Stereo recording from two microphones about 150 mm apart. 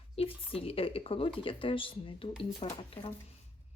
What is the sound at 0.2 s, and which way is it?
Speech, 40° left (ahead or behind).